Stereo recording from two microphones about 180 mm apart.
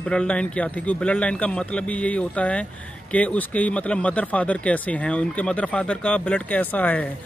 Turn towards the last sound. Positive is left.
turn(degrees=10)  # may be behind; listen again after turning